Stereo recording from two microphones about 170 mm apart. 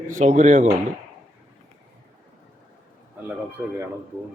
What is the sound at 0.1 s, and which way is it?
Speech, 45° right (ahead or behind).